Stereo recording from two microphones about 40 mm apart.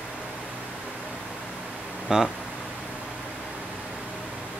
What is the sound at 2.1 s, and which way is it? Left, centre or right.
Speech, centre.